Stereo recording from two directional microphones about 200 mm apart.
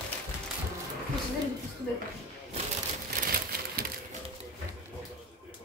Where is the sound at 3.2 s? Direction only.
50° right (ahead or behind).